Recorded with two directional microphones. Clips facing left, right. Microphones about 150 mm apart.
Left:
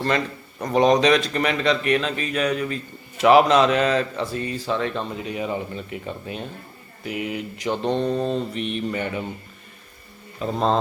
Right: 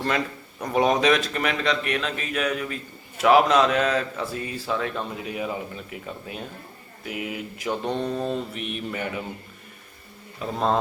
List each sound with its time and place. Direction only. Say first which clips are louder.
0.6 s a man's voice: left 3 dB; 5° right (ahead or behind)
7.8 s mantra: left 6 dB; 30° left (ahead or behind)
8.2 s a man's voice: left 4 dB; 5° right (ahead or behind)